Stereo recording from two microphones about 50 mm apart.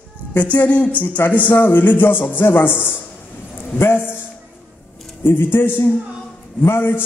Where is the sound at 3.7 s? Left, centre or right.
Left.